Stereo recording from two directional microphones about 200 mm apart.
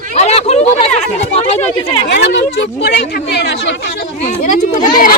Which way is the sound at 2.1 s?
55° left (ahead or behind).